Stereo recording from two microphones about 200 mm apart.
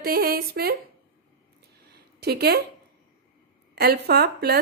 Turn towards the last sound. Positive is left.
turn(degrees=-50)  # may be behind; listen again after turning